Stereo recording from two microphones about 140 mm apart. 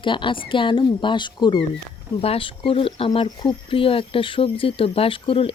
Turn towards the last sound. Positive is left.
turn(degrees=40)  # may be behind; listen again after turning